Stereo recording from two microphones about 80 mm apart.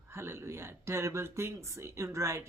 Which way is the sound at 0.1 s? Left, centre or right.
Right.